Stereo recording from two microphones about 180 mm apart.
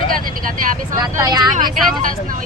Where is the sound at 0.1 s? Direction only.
50° right (ahead or behind).